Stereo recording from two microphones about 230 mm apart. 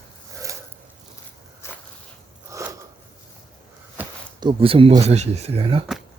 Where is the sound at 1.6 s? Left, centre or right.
Centre.